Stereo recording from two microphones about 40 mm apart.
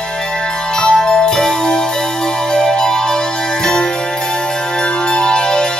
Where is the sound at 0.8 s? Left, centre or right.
Centre.